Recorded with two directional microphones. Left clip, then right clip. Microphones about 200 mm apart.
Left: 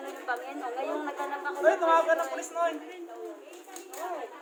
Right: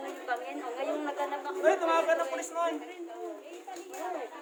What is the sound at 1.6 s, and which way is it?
A man's voice, 20° right (ahead or behind).